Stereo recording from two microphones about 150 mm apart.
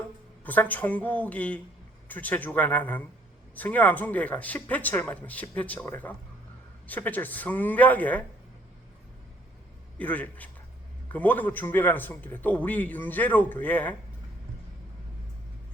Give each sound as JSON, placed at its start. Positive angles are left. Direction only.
{"t": 0.4, "sound": "a man's voice", "side_deg": 10}
{"t": 10.0, "sound": "a man's voice", "side_deg": 10}